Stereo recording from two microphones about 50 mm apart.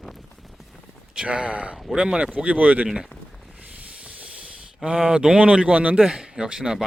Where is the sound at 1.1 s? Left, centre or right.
Right.